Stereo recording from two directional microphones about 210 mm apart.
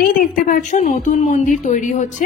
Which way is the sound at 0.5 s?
35° left (ahead or behind).